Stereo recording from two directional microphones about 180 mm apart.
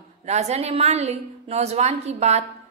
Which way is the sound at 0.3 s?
40° right (ahead or behind).